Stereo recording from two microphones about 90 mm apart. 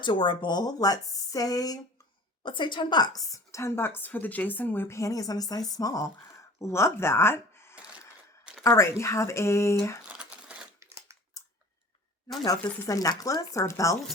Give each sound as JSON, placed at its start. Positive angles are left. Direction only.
{"t": 0.0, "sound": "speech", "side_deg": 60}
{"t": 2.4, "sound": "a woman's voice", "side_deg": 65}
{"t": 10.2, "sound": "crumpling", "side_deg": -10}
{"t": 12.9, "sound": "a woman's voice", "side_deg": 40}